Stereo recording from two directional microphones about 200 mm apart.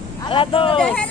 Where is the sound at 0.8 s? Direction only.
5° left (ahead or behind).